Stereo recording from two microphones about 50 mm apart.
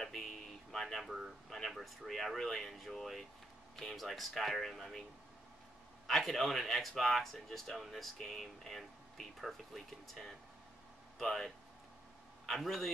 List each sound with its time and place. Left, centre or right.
0.0 s a sound: centre
1.6 s speech: centre
6.0 s speech: centre